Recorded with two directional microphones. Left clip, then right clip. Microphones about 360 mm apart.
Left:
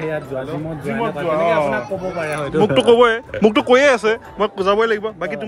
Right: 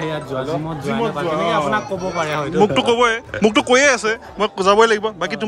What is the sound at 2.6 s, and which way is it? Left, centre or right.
Speech, centre.